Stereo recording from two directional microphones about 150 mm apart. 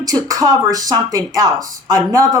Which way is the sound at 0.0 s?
25° right (ahead or behind).